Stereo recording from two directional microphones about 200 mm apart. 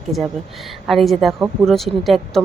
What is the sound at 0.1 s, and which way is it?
Speech, centre (ahead or behind).